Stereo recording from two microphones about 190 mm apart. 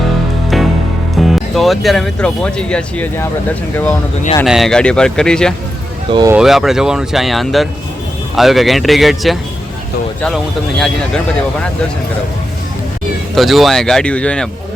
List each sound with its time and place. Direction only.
0.5 s music: centre (ahead or behind)
1.2 s speech: centre (ahead or behind)
4.4 s speech: centre (ahead or behind)
6.1 s speech: 25° right (ahead or behind)
6.3 s speech: centre (ahead or behind)
13.3 s speech: centre (ahead or behind)